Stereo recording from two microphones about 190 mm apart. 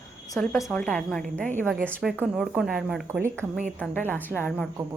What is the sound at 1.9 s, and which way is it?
A woman's voice, 10° right (ahead or behind).